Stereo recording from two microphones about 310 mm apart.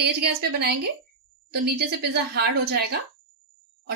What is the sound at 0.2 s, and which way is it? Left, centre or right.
Speech, right.